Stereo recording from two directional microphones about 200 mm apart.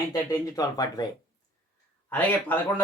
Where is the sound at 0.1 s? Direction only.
15° left (ahead or behind).